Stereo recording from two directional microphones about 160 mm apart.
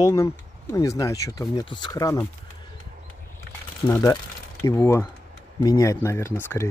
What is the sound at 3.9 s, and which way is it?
Speech, 25° left (ahead or behind).